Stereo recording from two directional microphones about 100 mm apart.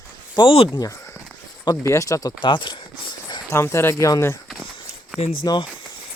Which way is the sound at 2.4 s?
50° left (ahead or behind).